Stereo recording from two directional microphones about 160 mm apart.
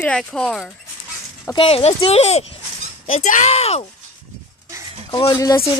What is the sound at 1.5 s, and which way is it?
Speech, 35° left (ahead or behind).